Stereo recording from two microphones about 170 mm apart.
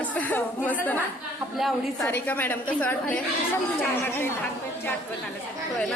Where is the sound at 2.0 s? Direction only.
10° left (ahead or behind).